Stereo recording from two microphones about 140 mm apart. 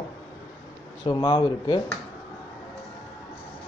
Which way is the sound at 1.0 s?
30° left (ahead or behind).